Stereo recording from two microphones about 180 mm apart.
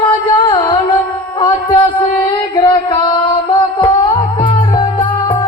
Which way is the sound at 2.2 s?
25° left (ahead or behind).